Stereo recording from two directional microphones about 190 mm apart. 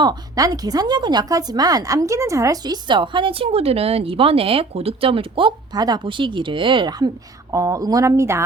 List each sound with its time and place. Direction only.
0.0 s speech: 20° right (ahead or behind)